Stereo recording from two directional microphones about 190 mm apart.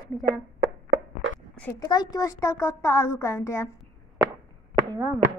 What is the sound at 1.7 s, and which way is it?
A child's voice, 20° left (ahead or behind).